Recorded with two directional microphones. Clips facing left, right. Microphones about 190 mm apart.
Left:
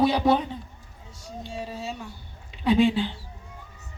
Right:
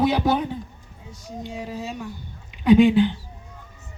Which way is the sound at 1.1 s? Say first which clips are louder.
Right 4 dB; 20° right (ahead or behind).